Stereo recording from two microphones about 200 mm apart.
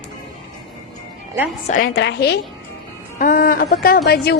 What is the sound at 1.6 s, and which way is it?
Speech, 45° left (ahead or behind).